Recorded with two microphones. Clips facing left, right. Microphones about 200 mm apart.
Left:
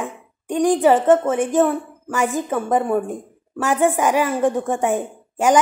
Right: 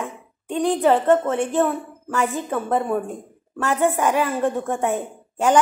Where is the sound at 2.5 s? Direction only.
10° left (ahead or behind).